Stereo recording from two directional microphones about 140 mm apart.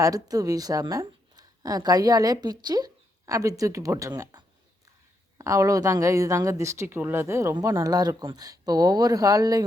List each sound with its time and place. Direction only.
0.0 s speech: 25° right (ahead or behind)